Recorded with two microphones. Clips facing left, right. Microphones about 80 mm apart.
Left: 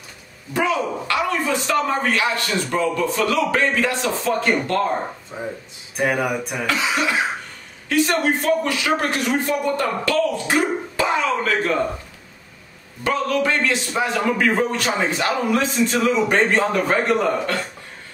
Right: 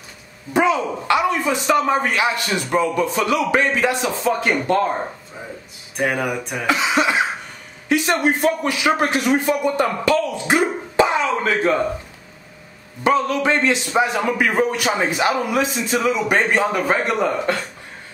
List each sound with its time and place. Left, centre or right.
0.5 s a man's voice: right
5.3 s speech: centre
5.9 s a sound: centre
6.6 s a man's voice: right
13.0 s a man's voice: right